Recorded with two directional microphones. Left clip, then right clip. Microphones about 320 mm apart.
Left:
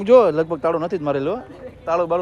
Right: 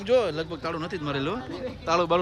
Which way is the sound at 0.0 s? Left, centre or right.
Centre.